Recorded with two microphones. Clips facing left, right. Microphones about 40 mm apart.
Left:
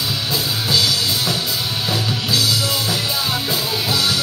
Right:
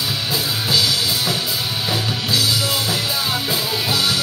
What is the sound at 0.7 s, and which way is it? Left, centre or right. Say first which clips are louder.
Music: even; centre.